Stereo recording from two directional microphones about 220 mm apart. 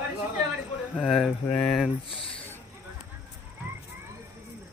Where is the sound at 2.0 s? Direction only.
25° left (ahead or behind).